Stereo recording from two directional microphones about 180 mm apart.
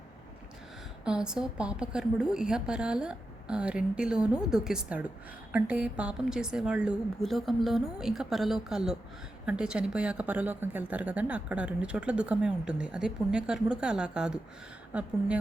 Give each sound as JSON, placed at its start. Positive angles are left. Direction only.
{"t": 1.0, "sound": "a woman's voice", "side_deg": -5}